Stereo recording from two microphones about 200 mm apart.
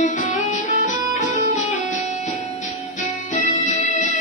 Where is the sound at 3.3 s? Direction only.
40° left (ahead or behind).